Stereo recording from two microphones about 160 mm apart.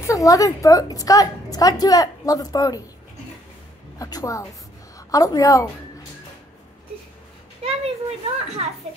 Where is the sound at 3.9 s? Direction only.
20° left (ahead or behind).